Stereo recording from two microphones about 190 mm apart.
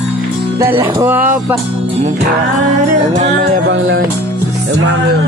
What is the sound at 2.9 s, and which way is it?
Music, 40° right (ahead or behind).